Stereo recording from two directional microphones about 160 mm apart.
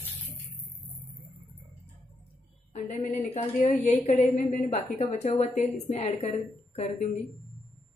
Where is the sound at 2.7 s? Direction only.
45° left (ahead or behind).